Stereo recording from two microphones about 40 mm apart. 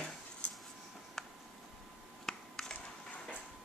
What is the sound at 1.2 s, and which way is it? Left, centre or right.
Tick, centre.